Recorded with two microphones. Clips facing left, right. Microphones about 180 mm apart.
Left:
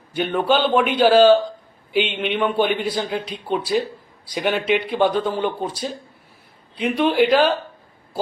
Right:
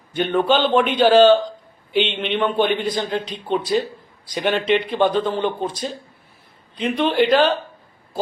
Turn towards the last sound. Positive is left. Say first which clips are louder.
# even
turn(degrees=10)  # may be behind; listen again after turning